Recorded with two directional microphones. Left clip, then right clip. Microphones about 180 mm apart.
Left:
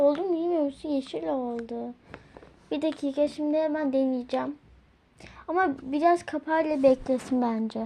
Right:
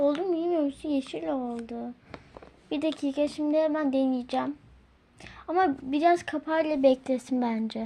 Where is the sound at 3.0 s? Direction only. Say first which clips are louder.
Left 1 dB; 20° right (ahead or behind).